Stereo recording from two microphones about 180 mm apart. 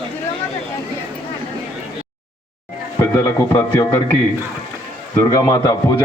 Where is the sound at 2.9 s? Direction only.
15° left (ahead or behind).